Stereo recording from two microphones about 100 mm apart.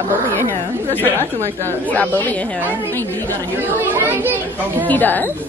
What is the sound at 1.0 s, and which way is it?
Speech, 25° right (ahead or behind).